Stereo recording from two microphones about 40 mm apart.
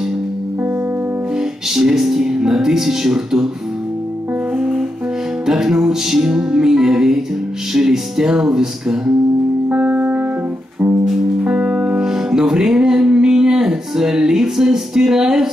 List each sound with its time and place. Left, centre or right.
1.7 s music: centre
4.6 s music: centre
5.5 s speech: centre
9.8 s music: right
11.4 s music: right
12.1 s music: centre